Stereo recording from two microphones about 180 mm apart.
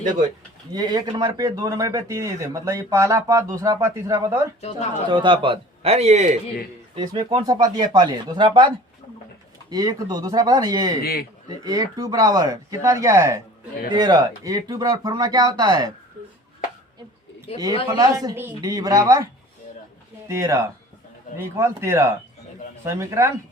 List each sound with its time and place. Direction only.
0.7 s a man's voice: 20° right (ahead or behind); by 6.4 s 40° right (ahead or behind)
6.9 s speech: 20° right (ahead or behind)
11.0 s a man's voice: 60° left (ahead or behind)
11.4 s speech: 20° right (ahead or behind)
17.5 s speech: 35° left (ahead or behind)
17.9 s speech: 20° right (ahead or behind)